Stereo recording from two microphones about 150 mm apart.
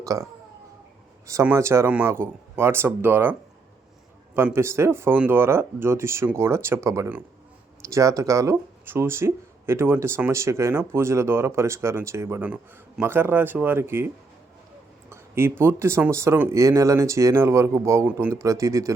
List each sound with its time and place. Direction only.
0.0 s speech: 20° right (ahead or behind)
1.3 s speech: 20° right (ahead or behind)
4.5 s speech: 15° right (ahead or behind)
15.1 s speech: 15° right (ahead or behind)